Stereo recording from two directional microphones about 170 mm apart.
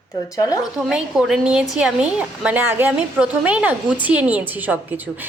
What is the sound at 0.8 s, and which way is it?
A woman's voice, 5° right (ahead or behind).